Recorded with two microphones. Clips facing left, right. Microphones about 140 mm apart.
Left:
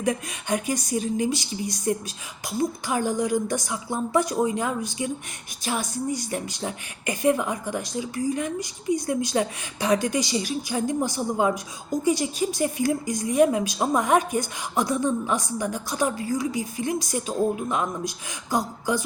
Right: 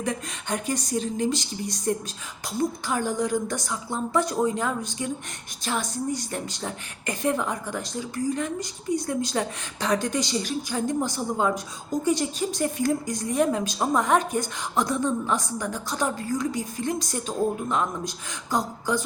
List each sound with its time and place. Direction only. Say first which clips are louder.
0.0 s speech: left 3 dB; 10° left (ahead or behind)